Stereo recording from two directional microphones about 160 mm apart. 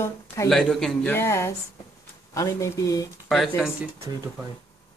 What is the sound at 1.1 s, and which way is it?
A woman's voice, 15° left (ahead or behind).